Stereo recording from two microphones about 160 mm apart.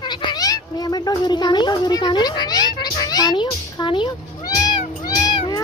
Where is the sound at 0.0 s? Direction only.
25° left (ahead or behind).